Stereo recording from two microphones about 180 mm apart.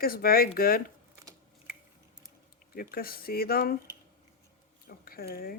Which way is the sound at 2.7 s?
55° left (ahead or behind).